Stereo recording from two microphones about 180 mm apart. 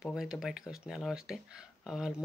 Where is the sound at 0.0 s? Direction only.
5° right (ahead or behind).